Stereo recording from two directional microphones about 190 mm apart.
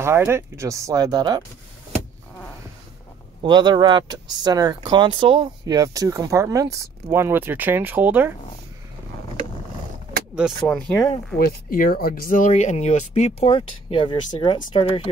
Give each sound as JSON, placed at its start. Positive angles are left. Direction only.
{"t": 0.0, "sound": "speech", "side_deg": -10}
{"t": 3.4, "sound": "speech", "side_deg": -25}
{"t": 10.3, "sound": "speech", "side_deg": 0}
{"t": 11.3, "sound": "speech", "side_deg": 50}